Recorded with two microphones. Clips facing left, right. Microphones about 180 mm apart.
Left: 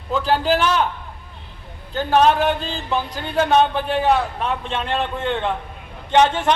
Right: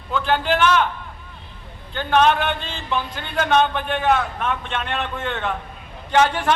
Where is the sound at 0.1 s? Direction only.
35° left (ahead or behind).